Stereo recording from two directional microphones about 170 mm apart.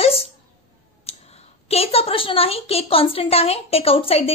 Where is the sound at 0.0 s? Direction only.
35° left (ahead or behind).